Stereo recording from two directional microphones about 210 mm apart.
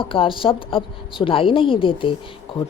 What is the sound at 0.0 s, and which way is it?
A woman's voice, 25° left (ahead or behind).